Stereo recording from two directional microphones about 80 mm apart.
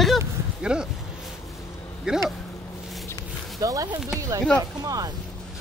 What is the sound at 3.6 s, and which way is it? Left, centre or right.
Speech, right.